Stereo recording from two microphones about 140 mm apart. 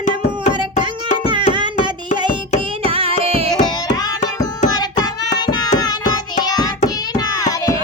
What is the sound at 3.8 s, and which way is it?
Music, 30° left (ahead or behind).